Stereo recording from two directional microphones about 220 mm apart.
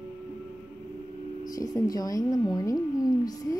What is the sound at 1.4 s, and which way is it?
A woman's voice, 15° left (ahead or behind).